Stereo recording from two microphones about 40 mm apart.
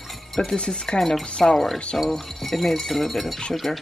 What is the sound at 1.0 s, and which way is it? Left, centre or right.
Speech, centre.